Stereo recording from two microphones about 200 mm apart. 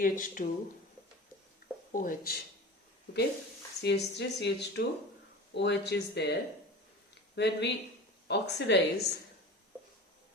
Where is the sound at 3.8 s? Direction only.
55° left (ahead or behind).